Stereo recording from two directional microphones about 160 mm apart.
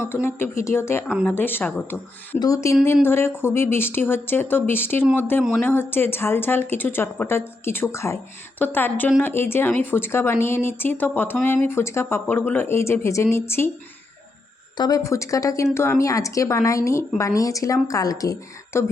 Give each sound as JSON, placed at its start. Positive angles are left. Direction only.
{"t": 0.1, "sound": "speech", "side_deg": 15}
{"t": 1.0, "sound": "speech", "side_deg": -5}
{"t": 1.3, "sound": "a woman's voice", "side_deg": 15}
{"t": 14.8, "sound": "a woman's voice", "side_deg": 25}